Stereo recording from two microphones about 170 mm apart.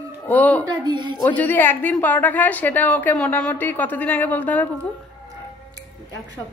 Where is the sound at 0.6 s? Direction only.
25° right (ahead or behind).